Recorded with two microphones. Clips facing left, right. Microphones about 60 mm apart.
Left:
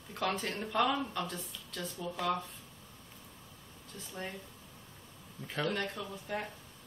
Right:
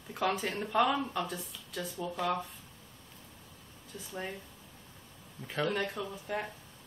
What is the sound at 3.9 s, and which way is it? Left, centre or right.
Speech, centre.